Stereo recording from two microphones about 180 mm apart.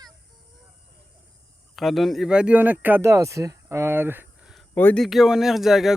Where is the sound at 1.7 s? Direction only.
Centre (ahead or behind).